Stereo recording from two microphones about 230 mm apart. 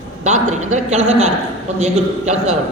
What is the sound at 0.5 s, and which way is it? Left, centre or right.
Speech, right.